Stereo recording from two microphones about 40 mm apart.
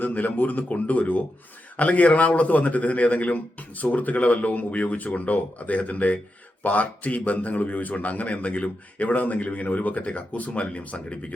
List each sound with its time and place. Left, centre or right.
0.0 s a man's voice: left